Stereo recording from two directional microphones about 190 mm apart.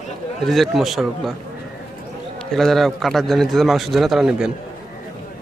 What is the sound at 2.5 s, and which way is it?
A man's voice, centre (ahead or behind).